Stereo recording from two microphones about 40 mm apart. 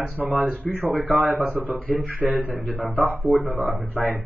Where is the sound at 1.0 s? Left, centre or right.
Right.